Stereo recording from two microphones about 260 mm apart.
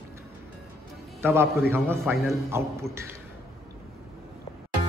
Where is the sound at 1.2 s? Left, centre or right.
Centre.